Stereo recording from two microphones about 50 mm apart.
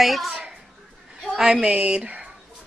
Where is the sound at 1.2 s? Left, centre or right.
Centre.